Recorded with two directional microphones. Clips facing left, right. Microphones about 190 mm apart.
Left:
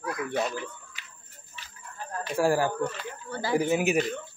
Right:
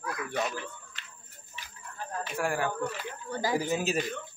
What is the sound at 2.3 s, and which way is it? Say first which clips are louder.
Speech: left 7 dB; 35° left (ahead or behind).